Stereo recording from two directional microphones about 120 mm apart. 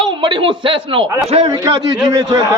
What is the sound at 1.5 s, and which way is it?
Speech, 35° right (ahead or behind).